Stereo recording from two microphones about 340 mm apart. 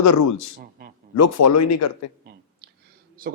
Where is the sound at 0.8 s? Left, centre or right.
Right.